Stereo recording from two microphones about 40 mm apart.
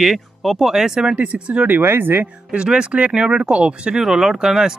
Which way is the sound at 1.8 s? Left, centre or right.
Right.